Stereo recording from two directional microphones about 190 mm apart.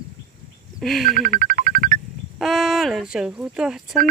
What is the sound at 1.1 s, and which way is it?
Music, 45° right (ahead or behind).